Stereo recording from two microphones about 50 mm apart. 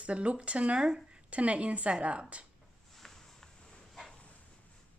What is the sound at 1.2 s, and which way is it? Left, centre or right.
Speech, right.